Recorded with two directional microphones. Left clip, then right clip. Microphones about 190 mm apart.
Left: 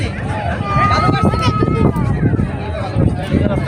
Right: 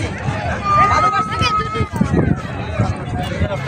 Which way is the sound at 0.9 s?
60° left (ahead or behind).